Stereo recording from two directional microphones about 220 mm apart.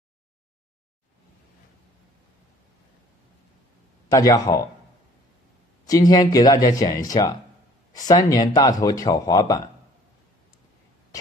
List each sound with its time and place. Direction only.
4.1 s speech: 15° left (ahead or behind)
5.9 s speech: 15° left (ahead or behind)